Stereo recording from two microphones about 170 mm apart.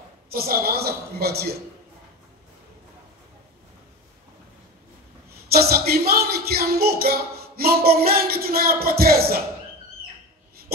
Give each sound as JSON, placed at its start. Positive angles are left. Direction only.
{"t": 0.3, "sound": "speech", "side_deg": -60}
{"t": 5.5, "sound": "speech", "side_deg": -65}